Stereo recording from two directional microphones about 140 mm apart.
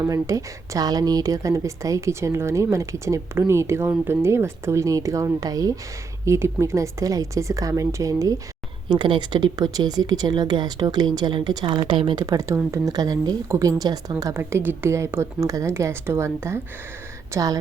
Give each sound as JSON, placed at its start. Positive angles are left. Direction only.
{"t": 0.0, "sound": "a woman's voice", "side_deg": -25}
{"t": 8.9, "sound": "a woman's voice", "side_deg": -35}